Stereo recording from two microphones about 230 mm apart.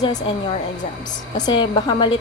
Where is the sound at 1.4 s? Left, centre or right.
Centre.